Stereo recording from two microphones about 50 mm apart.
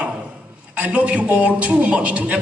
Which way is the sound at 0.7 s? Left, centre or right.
Right.